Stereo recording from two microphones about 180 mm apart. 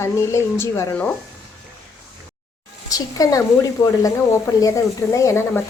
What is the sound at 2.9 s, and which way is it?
A woman's voice, 20° left (ahead or behind).